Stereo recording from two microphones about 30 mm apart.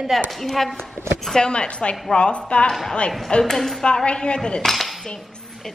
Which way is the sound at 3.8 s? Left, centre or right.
Left.